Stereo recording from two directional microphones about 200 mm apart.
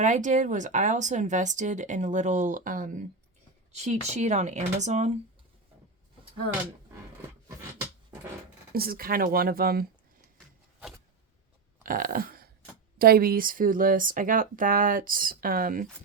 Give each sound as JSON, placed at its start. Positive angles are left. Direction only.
{"t": 0.0, "sound": "speech", "side_deg": -40}
{"t": 8.7, "sound": "speech", "side_deg": -50}
{"t": 11.8, "sound": "a sound", "side_deg": -45}
{"t": 13.0, "sound": "speech", "side_deg": -50}